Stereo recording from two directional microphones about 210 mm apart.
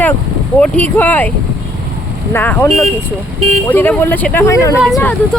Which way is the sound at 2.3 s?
10° left (ahead or behind).